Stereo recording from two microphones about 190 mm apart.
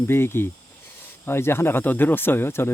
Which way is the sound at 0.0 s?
10° left (ahead or behind).